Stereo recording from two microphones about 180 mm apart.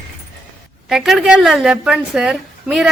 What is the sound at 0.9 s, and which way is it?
A woman's voice, centre (ahead or behind).